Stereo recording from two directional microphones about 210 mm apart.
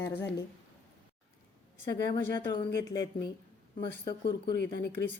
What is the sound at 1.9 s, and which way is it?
Speech, 20° left (ahead or behind).